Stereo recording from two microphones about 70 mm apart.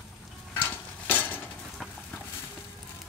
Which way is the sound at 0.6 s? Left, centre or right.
Left.